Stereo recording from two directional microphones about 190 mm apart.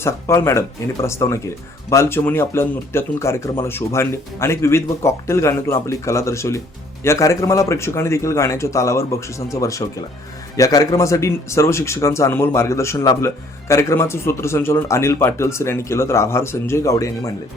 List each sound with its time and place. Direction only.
0.0 s speech: 15° left (ahead or behind)